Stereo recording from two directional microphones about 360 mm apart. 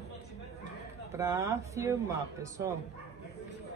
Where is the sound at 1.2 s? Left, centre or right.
Centre.